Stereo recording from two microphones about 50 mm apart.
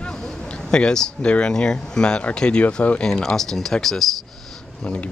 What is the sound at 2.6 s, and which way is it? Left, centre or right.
Speech, left.